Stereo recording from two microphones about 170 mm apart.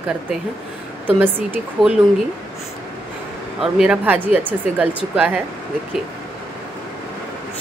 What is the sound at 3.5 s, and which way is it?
Speech, 5° right (ahead or behind).